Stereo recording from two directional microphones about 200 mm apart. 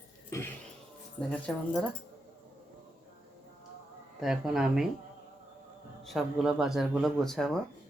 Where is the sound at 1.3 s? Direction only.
5° left (ahead or behind).